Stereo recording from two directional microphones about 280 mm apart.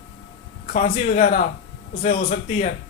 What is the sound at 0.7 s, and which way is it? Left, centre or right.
Speech, left.